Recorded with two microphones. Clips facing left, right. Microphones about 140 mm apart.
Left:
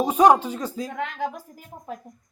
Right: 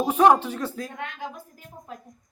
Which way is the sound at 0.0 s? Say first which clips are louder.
Left 1 dB; 15° left (ahead or behind).